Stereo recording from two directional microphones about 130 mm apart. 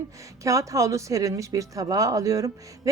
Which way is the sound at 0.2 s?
25° right (ahead or behind).